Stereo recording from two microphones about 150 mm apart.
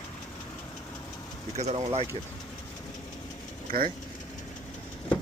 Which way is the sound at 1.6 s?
45° right (ahead or behind).